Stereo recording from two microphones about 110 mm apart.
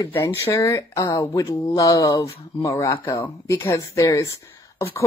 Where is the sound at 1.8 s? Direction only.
30° left (ahead or behind).